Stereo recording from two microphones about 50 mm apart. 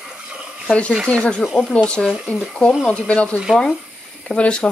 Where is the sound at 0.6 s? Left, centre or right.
Left.